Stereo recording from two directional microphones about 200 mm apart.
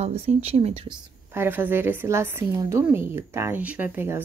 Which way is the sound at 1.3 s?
10° right (ahead or behind).